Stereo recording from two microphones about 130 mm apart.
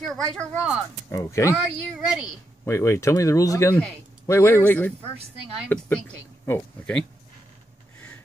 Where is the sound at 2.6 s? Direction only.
20° left (ahead or behind).